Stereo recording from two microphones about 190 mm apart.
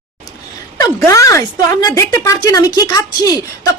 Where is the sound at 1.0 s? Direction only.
15° left (ahead or behind).